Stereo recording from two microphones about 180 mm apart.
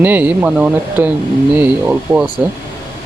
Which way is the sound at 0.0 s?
10° right (ahead or behind).